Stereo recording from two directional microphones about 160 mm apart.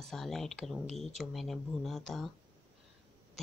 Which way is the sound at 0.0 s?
5° left (ahead or behind).